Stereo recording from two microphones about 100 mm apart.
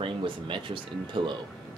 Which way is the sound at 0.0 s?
55° right (ahead or behind).